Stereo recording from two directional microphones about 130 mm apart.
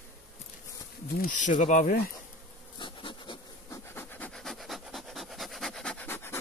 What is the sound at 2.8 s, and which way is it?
Bee, 40° left (ahead or behind).